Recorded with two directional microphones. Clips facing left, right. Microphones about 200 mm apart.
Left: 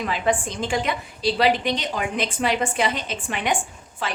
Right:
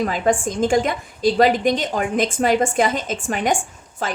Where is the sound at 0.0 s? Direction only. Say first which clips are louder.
Right 4 dB; 45° right (ahead or behind).